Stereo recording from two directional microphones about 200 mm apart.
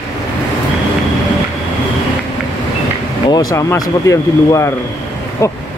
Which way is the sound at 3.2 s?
20° left (ahead or behind).